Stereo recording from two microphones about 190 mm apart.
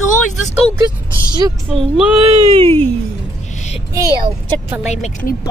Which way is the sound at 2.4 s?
25° right (ahead or behind).